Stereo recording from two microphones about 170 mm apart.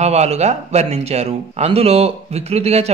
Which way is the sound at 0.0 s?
40° right (ahead or behind).